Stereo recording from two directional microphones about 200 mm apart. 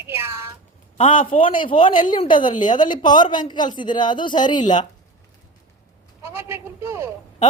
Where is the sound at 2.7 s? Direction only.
20° left (ahead or behind).